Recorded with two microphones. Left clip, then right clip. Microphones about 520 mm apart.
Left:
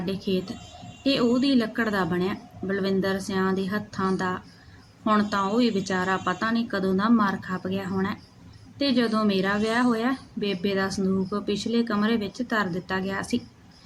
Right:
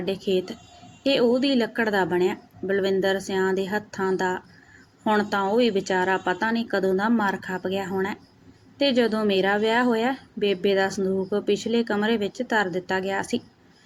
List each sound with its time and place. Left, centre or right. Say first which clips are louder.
0.0 s speech: right 4 dB; left